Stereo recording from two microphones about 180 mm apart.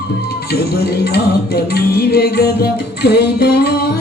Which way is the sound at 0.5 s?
60° left (ahead or behind).